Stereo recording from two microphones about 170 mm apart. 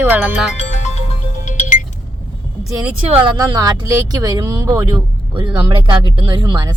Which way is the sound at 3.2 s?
25° right (ahead or behind).